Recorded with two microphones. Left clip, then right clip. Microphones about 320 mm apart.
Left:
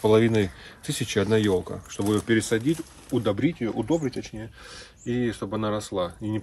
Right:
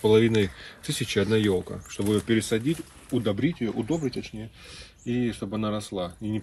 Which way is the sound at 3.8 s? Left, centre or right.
Left.